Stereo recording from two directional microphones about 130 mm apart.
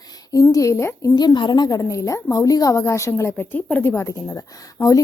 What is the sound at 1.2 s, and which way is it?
A woman's voice, 35° left (ahead or behind).